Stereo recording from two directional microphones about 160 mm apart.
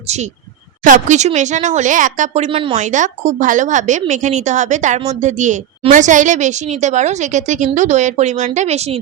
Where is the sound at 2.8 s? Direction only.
50° right (ahead or behind).